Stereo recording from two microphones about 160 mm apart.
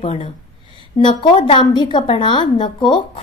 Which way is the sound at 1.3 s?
35° left (ahead or behind).